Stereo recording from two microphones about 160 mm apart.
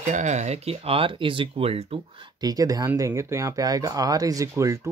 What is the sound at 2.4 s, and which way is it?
Speech, 25° right (ahead or behind).